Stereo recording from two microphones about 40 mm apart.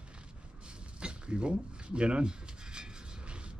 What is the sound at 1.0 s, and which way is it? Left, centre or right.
Rub, right.